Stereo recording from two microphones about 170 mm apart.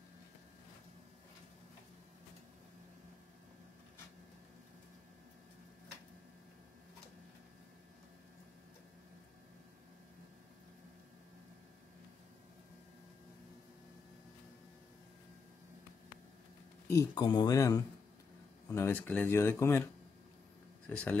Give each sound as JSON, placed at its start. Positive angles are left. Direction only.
{"t": 16.8, "sound": "speech", "side_deg": 20}
{"t": 20.8, "sound": "speech", "side_deg": 10}